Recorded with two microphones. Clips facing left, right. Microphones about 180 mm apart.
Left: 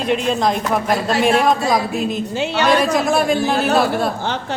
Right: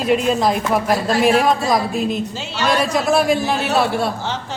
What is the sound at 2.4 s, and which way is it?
Speech, 60° left (ahead or behind).